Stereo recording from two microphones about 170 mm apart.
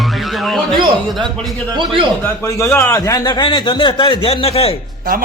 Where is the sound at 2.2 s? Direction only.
15° left (ahead or behind); by 4.8 s 35° left (ahead or behind).